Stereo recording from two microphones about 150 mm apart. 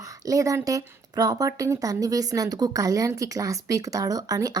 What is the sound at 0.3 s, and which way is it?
Speech, 20° right (ahead or behind).